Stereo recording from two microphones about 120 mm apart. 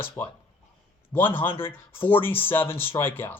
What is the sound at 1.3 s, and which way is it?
Speech, 45° left (ahead or behind).